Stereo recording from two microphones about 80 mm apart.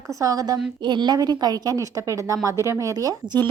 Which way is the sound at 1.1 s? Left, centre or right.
Right.